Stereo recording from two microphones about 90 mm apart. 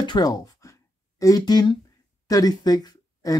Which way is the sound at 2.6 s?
45° left (ahead or behind).